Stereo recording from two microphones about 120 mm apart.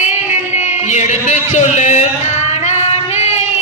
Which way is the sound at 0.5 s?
75° left (ahead or behind).